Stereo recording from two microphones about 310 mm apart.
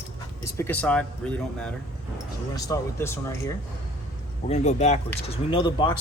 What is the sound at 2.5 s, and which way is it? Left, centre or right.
Speech, centre.